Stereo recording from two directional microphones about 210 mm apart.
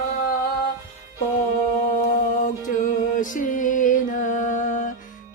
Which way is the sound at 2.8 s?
40° left (ahead or behind).